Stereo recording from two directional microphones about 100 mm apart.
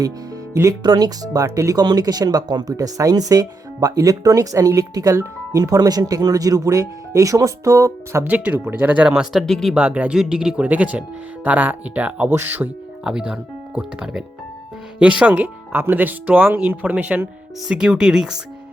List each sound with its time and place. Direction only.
0.5 s speech: 30° right (ahead or behind)
0.8 s speech: 40° right (ahead or behind); by 9.2 s 15° right (ahead or behind)
9.3 s speech: centre (ahead or behind)
9.7 s speech: 10° right (ahead or behind)